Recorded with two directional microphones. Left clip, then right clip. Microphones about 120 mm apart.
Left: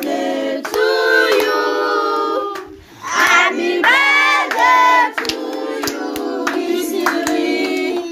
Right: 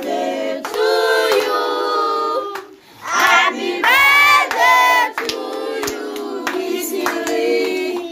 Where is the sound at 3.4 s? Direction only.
45° right (ahead or behind).